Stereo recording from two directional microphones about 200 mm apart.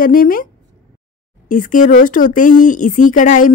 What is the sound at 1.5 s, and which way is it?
A woman's voice, 40° left (ahead or behind).